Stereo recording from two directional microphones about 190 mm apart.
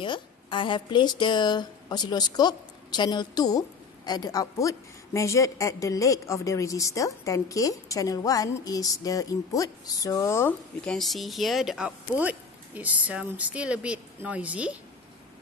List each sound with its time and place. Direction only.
0.0 s a woman's voice: 25° left (ahead or behind)
11.0 s speech: centre (ahead or behind)